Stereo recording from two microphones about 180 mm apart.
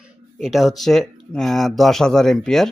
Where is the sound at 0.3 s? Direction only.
Centre (ahead or behind).